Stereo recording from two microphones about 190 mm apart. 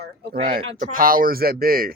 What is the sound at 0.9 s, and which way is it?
Speech, 50° right (ahead or behind).